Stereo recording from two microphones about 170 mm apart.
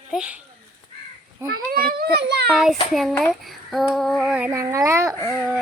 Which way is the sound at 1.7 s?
60° right (ahead or behind).